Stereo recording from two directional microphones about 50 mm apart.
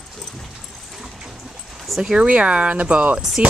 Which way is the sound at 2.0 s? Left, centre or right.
Centre.